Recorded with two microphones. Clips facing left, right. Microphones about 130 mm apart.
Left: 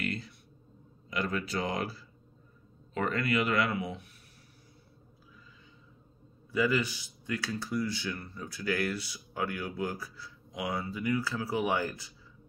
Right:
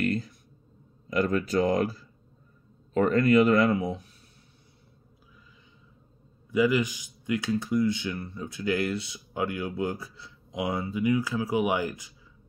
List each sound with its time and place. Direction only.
0.0 s a sound: 45° right (ahead or behind)
1.1 s speech: 45° right (ahead or behind)
6.5 s speech: 15° right (ahead or behind)